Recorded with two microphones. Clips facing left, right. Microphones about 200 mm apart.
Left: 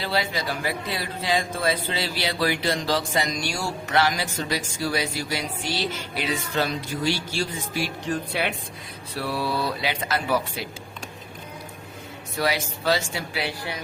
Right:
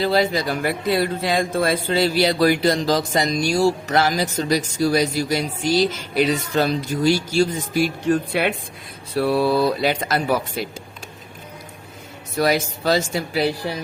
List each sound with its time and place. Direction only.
0.0 s speech: 40° right (ahead or behind)
8.3 s speech: 55° right (ahead or behind)
9.1 s speech: 45° right (ahead or behind)
12.4 s speech: 45° right (ahead or behind)